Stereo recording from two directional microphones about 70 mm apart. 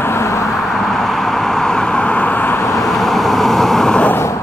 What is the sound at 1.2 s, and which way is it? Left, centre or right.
Vehicle, centre.